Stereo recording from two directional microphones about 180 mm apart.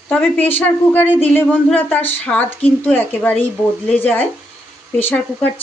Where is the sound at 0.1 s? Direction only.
10° left (ahead or behind).